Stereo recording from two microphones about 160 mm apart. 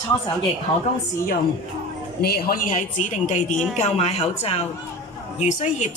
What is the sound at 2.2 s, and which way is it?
A woman's voice, 75° left (ahead or behind).